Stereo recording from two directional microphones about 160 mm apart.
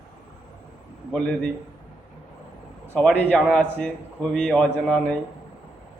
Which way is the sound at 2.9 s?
5° left (ahead or behind).